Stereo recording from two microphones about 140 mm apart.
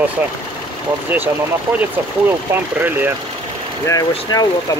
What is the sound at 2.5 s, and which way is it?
Speech, 15° right (ahead or behind).